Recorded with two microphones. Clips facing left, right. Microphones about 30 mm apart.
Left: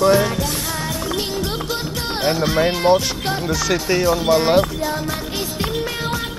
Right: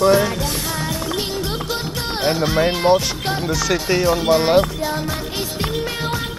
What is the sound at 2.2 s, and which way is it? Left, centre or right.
Speech, centre.